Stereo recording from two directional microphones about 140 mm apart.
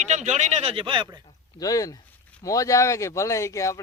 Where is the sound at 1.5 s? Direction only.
25° left (ahead or behind).